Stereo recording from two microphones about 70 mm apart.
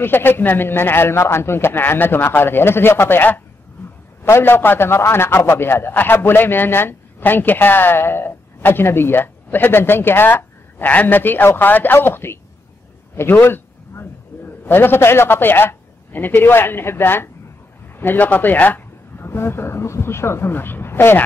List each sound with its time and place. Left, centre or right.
0.0 s a man's voice: left